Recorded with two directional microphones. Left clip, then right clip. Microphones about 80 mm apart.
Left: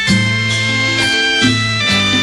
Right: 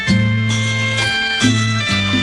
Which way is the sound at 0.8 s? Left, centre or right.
Centre.